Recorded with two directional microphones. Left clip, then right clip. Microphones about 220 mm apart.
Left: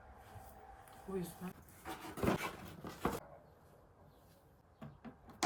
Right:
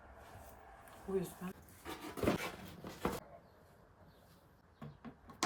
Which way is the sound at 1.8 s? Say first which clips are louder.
Right 1 dB; centre (ahead or behind).